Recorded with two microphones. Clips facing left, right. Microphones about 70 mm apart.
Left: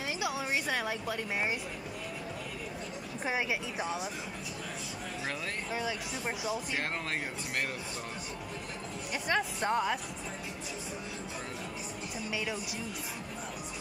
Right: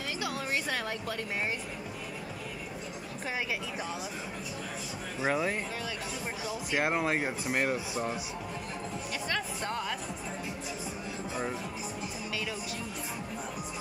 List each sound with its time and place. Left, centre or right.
0.2 s music: centre
5.2 s speech: centre
6.7 s speech: centre
9.3 s speech: centre